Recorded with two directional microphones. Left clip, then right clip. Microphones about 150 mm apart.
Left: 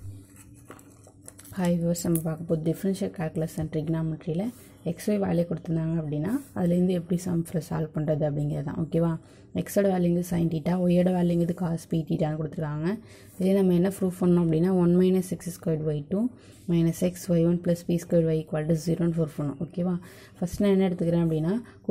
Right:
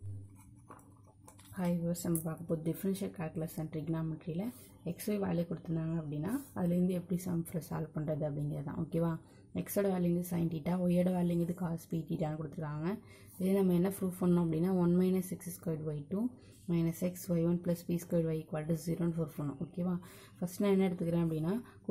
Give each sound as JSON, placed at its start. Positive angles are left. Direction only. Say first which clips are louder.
{"t": 1.5, "sound": "speech", "louder": "left 10 dB", "side_deg": 25}